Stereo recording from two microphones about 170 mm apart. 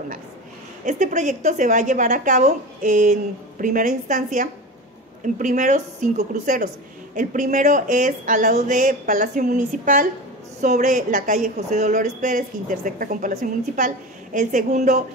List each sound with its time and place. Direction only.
0.8 s a woman's voice: 50° right (ahead or behind)